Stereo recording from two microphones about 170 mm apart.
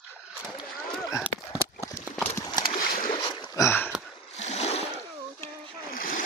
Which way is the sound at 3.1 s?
30° left (ahead or behind).